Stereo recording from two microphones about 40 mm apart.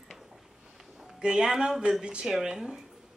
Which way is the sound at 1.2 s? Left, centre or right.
Right.